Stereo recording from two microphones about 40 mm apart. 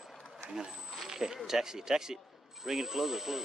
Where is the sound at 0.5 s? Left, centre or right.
Centre.